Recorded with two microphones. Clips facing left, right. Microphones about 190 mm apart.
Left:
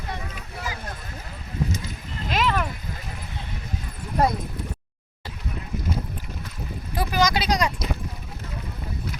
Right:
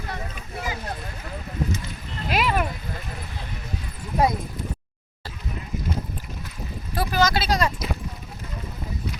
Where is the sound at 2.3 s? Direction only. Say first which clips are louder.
Right 1 dB; 10° right (ahead or behind).